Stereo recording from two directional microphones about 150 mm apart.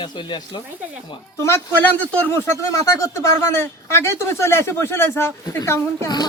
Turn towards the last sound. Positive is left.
turn(degrees=25)  # may be behind; listen again after turning